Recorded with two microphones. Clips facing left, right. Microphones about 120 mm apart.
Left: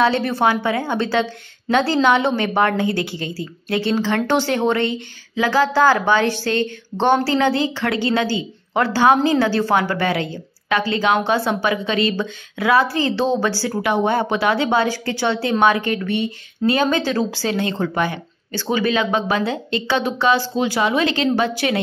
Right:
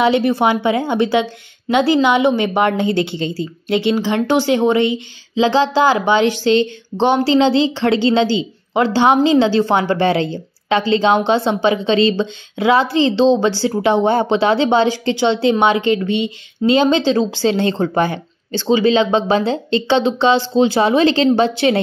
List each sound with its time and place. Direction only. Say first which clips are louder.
0.0 s a woman's voice: right 3 dB; 15° right (ahead or behind)